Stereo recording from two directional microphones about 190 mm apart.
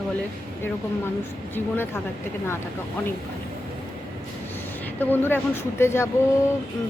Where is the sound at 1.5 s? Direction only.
10° left (ahead or behind).